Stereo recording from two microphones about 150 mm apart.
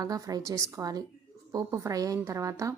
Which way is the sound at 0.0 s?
25° right (ahead or behind).